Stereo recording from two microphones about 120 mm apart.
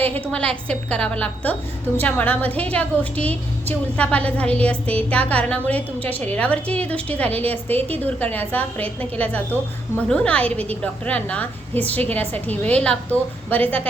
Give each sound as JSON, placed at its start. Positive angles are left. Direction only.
{"t": 0.0, "sound": "a woman's voice", "side_deg": 10}